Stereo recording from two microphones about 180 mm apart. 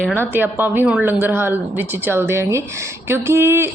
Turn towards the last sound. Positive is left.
turn(degrees=-15)  # may be behind; listen again after turning